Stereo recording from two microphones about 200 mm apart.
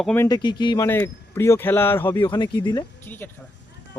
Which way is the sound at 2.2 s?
25° left (ahead or behind).